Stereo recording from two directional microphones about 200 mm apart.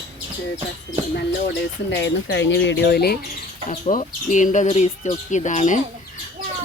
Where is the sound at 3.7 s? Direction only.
40° left (ahead or behind).